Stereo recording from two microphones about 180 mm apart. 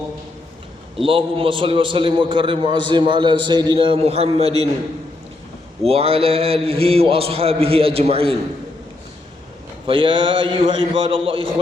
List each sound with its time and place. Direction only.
0.9 s a man's voice: 30° right (ahead or behind)
5.9 s a man's voice: 30° right (ahead or behind)
9.8 s a man's voice: 30° right (ahead or behind)